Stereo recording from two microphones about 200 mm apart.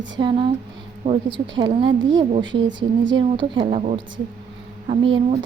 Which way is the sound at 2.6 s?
65° right (ahead or behind).